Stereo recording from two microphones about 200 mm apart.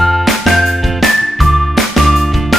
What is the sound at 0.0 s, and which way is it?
Music, centre (ahead or behind).